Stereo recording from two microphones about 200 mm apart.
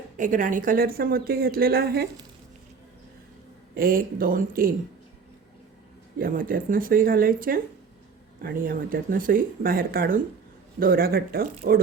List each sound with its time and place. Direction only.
0.2 s a woman's voice: 40° right (ahead or behind)
3.8 s a woman's voice: 45° right (ahead or behind)
6.1 s a woman's voice: 45° right (ahead or behind)